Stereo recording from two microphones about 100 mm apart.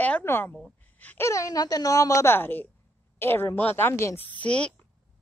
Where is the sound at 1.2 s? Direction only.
30° left (ahead or behind).